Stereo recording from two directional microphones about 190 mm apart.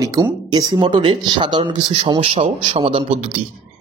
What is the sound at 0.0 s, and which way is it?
Speech, 20° right (ahead or behind).